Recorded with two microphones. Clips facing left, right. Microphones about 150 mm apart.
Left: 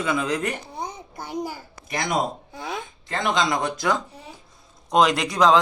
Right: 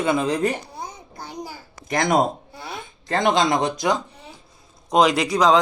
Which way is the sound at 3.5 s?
20° right (ahead or behind).